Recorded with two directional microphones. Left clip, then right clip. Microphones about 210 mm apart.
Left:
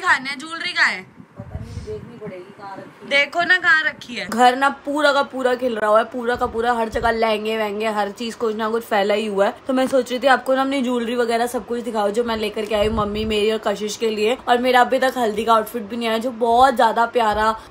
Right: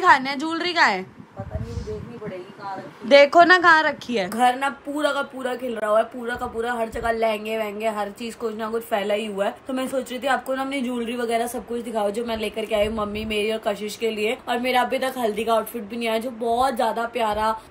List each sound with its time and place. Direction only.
0.0 s a woman's voice: 15° right (ahead or behind)
3.1 s a woman's voice: 30° right (ahead or behind)
4.3 s a woman's voice: 15° left (ahead or behind)